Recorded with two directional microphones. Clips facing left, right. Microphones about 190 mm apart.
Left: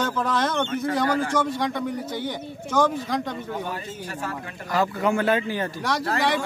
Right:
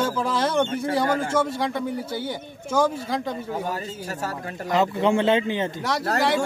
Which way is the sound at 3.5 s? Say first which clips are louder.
Right 2 dB; 40° right (ahead or behind).